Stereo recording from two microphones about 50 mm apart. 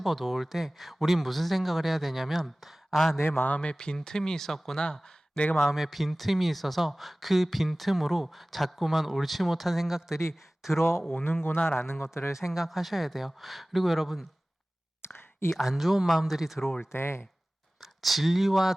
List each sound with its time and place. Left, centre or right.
0.0 s speech: centre
3.2 s speech: left
3.6 s speech: centre
4.8 s speech: centre
5.5 s speech: centre
10.7 s speech: left
11.1 s a man's voice: left
12.4 s speech: centre
15.0 s a sound: left
15.6 s speech: centre
16.9 s speech: left
17.7 s speech: centre